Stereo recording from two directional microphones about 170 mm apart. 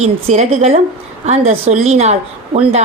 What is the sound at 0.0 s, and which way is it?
A woman's voice, 40° right (ahead or behind).